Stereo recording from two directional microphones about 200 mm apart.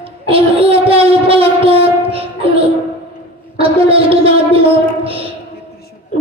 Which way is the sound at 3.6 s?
30° right (ahead or behind).